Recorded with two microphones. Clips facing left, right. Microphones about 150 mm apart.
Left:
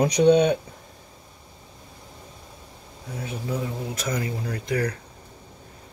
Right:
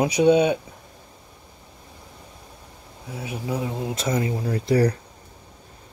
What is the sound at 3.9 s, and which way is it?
Speech, 25° right (ahead or behind).